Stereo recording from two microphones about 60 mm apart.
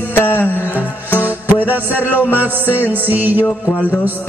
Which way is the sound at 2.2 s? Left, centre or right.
Left.